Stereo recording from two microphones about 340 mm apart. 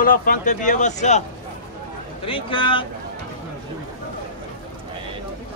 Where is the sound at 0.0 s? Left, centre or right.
Left.